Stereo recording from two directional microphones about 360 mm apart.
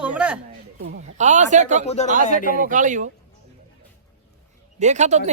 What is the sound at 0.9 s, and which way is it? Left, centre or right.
Speech, centre.